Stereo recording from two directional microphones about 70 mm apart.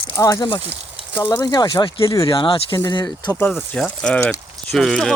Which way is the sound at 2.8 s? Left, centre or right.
Left.